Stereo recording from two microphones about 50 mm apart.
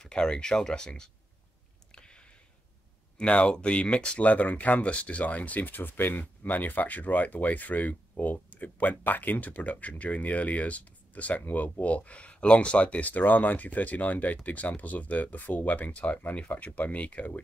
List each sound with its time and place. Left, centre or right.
0.0 s speech: centre
2.0 s a sound: centre
3.2 s speech: left
4.2 s speech: left